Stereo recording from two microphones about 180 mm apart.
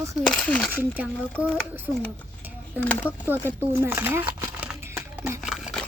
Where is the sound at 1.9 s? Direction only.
Centre (ahead or behind).